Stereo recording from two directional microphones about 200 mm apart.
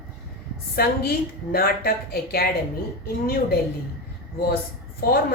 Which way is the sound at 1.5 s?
50° left (ahead or behind).